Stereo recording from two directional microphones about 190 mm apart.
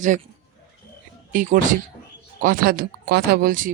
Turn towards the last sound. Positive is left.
turn(degrees=-45)  # may be behind; listen again after turning